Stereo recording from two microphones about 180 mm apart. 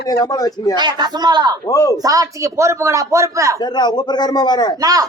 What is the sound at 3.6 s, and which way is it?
A man's voice, 25° left (ahead or behind).